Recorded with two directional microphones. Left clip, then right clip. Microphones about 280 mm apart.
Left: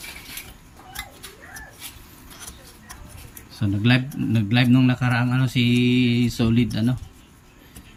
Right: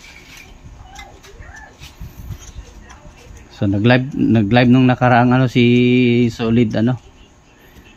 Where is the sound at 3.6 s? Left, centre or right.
Centre.